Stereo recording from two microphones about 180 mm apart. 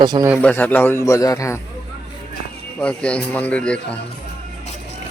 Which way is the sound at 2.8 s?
5° left (ahead or behind).